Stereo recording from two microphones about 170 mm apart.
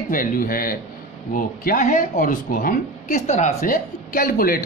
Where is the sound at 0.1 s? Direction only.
55° left (ahead or behind).